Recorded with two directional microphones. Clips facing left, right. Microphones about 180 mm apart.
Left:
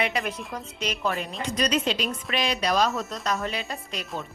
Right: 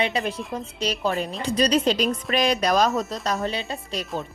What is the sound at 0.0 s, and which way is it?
A woman's voice, 30° right (ahead or behind).